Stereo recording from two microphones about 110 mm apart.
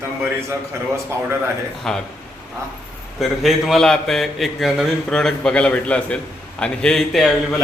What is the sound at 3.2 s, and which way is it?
A man's voice, centre (ahead or behind).